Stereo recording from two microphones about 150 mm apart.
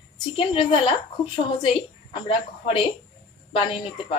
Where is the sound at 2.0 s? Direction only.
35° left (ahead or behind).